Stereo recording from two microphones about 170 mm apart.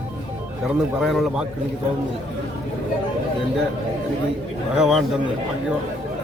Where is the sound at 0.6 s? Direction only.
Centre (ahead or behind).